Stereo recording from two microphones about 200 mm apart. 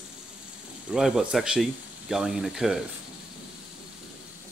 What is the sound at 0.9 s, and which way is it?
Speech, 5° right (ahead or behind).